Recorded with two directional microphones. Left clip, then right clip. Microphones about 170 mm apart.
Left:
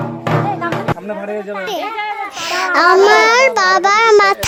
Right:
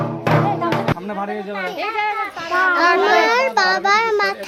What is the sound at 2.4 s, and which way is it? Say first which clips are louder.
A child's voice: left 3 dB; 50° left (ahead or behind).